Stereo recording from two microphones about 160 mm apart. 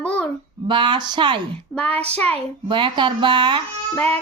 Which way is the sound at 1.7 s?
10° left (ahead or behind).